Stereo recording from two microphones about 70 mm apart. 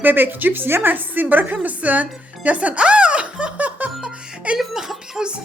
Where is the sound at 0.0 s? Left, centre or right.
Right.